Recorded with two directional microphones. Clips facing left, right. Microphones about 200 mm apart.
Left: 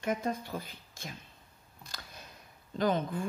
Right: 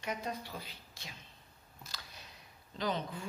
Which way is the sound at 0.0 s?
50° left (ahead or behind).